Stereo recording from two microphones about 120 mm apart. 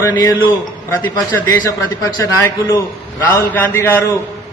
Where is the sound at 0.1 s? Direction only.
35° left (ahead or behind).